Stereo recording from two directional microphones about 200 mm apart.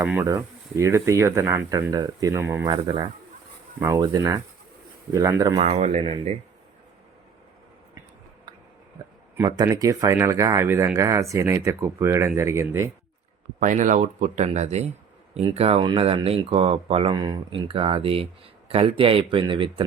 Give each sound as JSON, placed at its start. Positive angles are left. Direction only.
{"t": 0.0, "sound": "speech", "side_deg": -10}
{"t": 5.5, "sound": "speech", "side_deg": -30}
{"t": 9.3, "sound": "speech", "side_deg": -15}
{"t": 13.6, "sound": "speech", "side_deg": -40}